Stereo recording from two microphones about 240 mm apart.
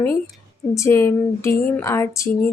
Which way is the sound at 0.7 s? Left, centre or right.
Centre.